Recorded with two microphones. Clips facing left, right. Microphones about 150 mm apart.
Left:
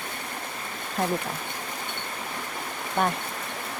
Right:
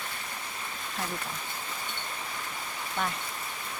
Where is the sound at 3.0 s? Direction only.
55° left (ahead or behind).